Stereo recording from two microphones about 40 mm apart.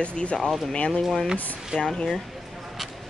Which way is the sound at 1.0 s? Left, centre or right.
Centre.